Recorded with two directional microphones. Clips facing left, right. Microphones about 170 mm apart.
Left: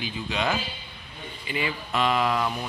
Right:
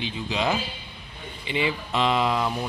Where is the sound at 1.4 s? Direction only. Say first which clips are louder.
Right 4 dB; 25° right (ahead or behind).